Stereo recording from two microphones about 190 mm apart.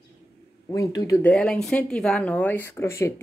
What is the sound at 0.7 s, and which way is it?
Speech, 15° left (ahead or behind).